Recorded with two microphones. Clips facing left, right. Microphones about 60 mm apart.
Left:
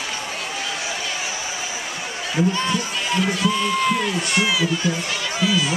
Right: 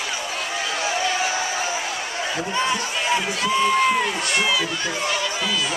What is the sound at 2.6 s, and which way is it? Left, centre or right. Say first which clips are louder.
Speech: right 1 dB; centre.